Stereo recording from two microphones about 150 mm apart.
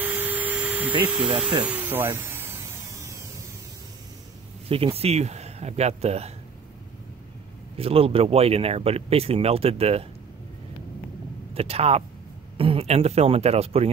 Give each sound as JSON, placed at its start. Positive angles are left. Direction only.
{"t": 0.0, "sound": "hum", "side_deg": -10}
{"t": 1.6, "sound": "a sound", "side_deg": -10}
{"t": 4.6, "sound": "speech", "side_deg": -40}
{"t": 7.7, "sound": "speech", "side_deg": -40}
{"t": 11.5, "sound": "speech", "side_deg": -40}